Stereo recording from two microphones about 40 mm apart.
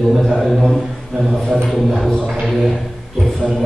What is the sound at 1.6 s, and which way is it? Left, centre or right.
Music, centre.